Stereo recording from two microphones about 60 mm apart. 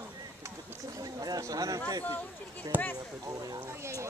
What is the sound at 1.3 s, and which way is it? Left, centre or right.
Speech, right.